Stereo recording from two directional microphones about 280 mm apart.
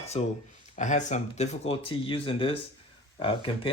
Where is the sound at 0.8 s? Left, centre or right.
Left.